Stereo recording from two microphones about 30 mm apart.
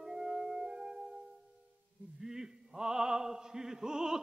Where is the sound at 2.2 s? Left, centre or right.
Centre.